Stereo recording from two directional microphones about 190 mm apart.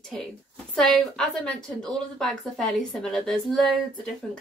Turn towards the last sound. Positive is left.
turn(degrees=0)  # may be behind; listen again after turning